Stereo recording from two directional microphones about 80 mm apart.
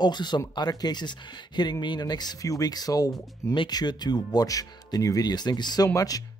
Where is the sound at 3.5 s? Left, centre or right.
Left.